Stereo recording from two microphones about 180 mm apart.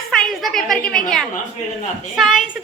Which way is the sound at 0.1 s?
Centre (ahead or behind).